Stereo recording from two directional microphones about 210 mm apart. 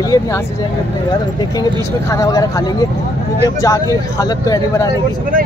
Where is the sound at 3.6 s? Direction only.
15° left (ahead or behind).